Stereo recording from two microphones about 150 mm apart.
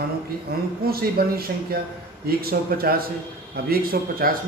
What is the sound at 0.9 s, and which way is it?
A man's voice, 90° right.